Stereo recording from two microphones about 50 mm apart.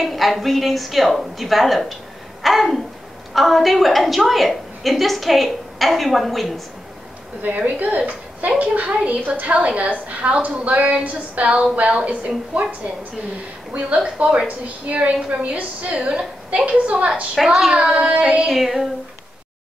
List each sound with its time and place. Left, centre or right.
0.0 s a woman's voice: centre
7.4 s a woman's voice: right
13.7 s a woman's voice: right
17.4 s a woman's voice: centre
17.6 s a woman's voice: centre
18.5 s a woman's voice: centre